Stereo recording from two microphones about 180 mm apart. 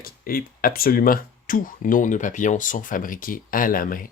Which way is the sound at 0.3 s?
55° left (ahead or behind).